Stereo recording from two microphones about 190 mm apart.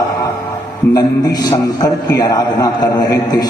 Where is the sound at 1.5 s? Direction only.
20° left (ahead or behind).